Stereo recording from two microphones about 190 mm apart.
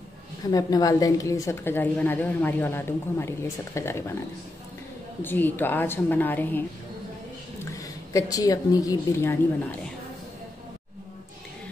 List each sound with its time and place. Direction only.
0.5 s a woman's voice: 20° left (ahead or behind)
5.2 s a woman's voice: 10° left (ahead or behind)
7.8 s a woman's voice: 20° left (ahead or behind)